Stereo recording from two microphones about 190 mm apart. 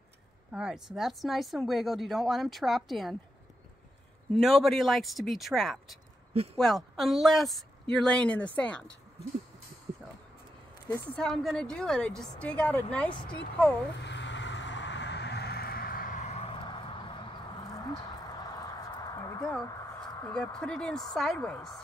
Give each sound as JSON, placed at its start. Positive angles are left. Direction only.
{"t": 0.5, "sound": "speech", "side_deg": -5}
{"t": 4.3, "sound": "speech", "side_deg": 0}
{"t": 6.3, "sound": "speech", "side_deg": -30}
{"t": 6.6, "sound": "speech", "side_deg": 0}
{"t": 10.9, "sound": "speech", "side_deg": 5}
{"t": 14.0, "sound": "vehicle", "side_deg": 70}
{"t": 17.8, "sound": "clip-clop", "side_deg": 20}
{"t": 20.3, "sound": "speech", "side_deg": 5}